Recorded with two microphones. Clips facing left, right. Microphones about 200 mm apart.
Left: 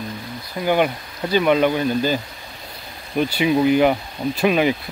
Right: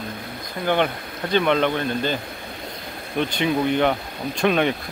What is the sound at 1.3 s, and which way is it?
Speech, 5° left (ahead or behind).